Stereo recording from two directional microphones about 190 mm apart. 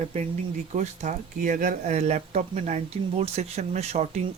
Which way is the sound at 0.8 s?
40° right (ahead or behind).